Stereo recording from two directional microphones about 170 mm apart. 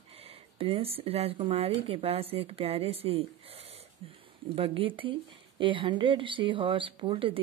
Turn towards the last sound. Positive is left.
turn(degrees=-30)  # may be behind; listen again after turning